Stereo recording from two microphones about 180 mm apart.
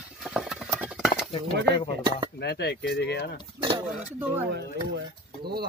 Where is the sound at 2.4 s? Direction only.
65° left (ahead or behind).